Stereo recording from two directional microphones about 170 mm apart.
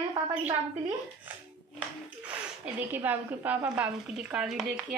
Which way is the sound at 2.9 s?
10° right (ahead or behind).